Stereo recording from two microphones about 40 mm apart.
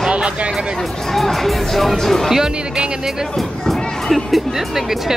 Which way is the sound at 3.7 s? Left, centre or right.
Centre.